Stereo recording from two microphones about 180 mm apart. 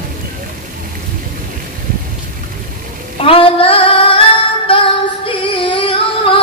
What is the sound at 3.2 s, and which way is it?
Female singing, 30° left (ahead or behind).